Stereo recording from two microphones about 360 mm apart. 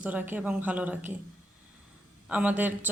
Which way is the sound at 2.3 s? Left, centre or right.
Centre.